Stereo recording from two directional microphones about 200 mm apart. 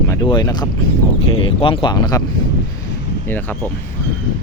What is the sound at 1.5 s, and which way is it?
Speech, 25° left (ahead or behind).